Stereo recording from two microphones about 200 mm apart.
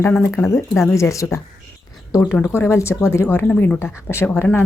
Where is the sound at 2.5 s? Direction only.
15° left (ahead or behind).